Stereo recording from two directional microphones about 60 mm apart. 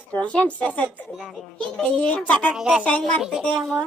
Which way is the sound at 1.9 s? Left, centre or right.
Left.